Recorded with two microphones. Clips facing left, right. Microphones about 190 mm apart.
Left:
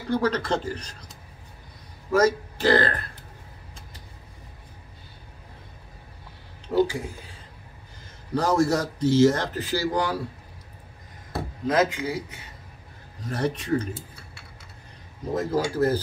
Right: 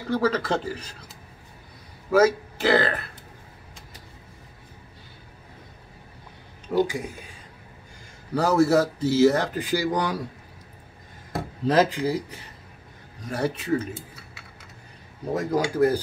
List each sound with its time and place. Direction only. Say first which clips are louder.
0.2 s speech: right 1 dB; 5° right (ahead or behind)
2.0 s speech: right 2 dB; 5° right (ahead or behind)
6.7 s speech: left 1 dB; 15° right (ahead or behind)
8.4 s a man's voice: right 3 dB; 5° right (ahead or behind)
11.6 s speech: right 2 dB; 35° right (ahead or behind)
13.2 s a man's voice: even; 10° right (ahead or behind)
15.3 s a man's voice: right 1 dB; 15° right (ahead or behind)